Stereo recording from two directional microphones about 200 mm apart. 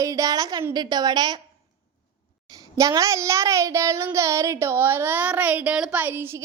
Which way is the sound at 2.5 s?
15° right (ahead or behind).